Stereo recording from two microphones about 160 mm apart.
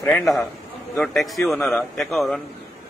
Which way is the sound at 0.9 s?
Centre (ahead or behind).